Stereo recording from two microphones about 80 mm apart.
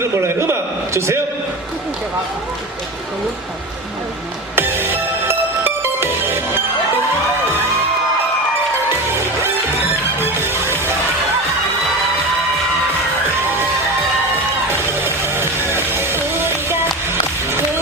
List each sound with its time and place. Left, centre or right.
0.0 s a sound: right
4.5 s music: right
10.4 s music: right
15.0 s music: right